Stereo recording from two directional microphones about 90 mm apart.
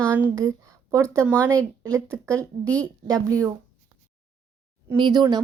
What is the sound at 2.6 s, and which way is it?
Speech, 15° left (ahead or behind).